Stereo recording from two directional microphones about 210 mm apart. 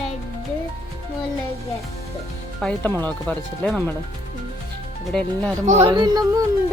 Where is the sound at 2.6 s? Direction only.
5° left (ahead or behind).